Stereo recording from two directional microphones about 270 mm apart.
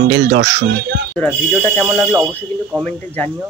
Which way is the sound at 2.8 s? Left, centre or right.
Centre.